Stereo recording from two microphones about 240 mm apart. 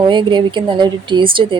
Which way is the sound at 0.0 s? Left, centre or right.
Centre.